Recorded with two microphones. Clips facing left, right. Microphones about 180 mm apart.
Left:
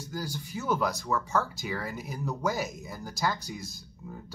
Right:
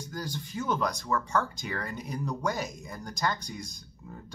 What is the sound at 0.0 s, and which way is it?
Speech, 10° left (ahead or behind).